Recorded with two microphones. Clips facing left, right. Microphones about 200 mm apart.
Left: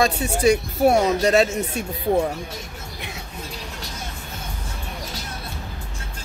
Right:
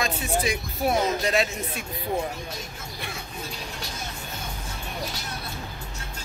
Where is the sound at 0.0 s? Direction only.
40° left (ahead or behind).